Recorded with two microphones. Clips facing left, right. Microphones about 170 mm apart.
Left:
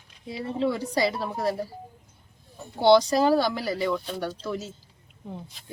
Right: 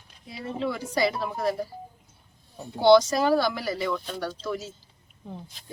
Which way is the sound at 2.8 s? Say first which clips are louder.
Right 1 dB; 30° left (ahead or behind).